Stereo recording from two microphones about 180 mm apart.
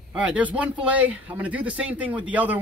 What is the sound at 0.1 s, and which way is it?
Speech, 5° right (ahead or behind).